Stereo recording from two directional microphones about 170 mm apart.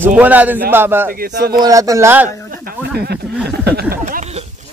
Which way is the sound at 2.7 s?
70° right (ahead or behind).